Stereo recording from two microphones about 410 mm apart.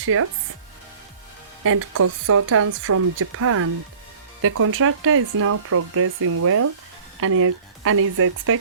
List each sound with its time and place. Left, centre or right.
0.0 s speech: right
1.6 s speech: right